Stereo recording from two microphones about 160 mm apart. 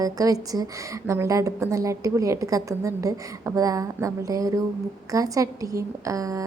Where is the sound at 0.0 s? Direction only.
20° right (ahead or behind).